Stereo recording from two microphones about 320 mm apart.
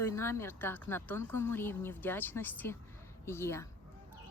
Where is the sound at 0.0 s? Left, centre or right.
Centre.